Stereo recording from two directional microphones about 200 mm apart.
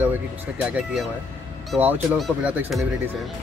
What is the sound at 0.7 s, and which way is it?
Speech, 5° right (ahead or behind).